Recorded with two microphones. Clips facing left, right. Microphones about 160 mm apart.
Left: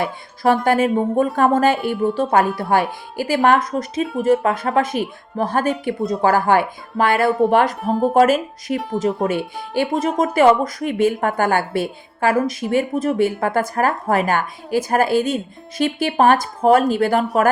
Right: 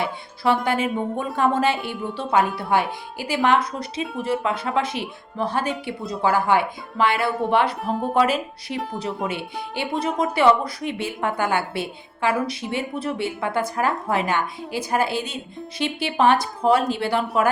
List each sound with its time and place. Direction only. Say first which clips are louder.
0.0 s a woman's voice: left 4 dB; 45° left (ahead or behind)